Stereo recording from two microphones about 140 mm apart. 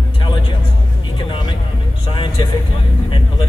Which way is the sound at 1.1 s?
35° left (ahead or behind).